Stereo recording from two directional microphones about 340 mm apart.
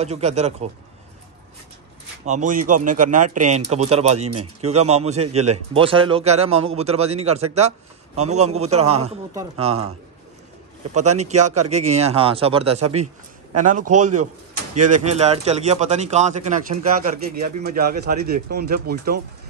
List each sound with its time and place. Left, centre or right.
0.0 s a man's voice: centre
2.2 s a man's voice: right
11.2 s a man's voice: centre
14.9 s a man's voice: centre